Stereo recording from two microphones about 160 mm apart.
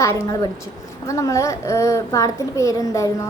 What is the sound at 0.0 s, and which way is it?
A woman's voice, 20° left (ahead or behind).